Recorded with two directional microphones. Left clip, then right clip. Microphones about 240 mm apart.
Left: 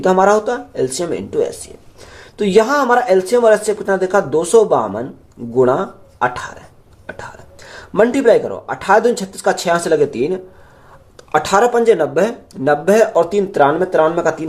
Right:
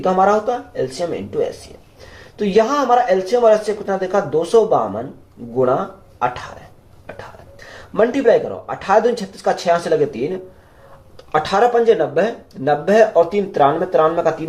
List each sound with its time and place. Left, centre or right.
0.0 s speech: left
7.9 s speech: left